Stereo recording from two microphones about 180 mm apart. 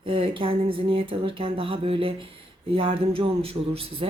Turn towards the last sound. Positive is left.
turn(degrees=-30)  # may be behind; listen again after turning